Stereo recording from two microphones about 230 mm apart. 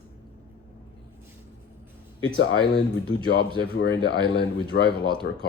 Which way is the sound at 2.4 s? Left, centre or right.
Left.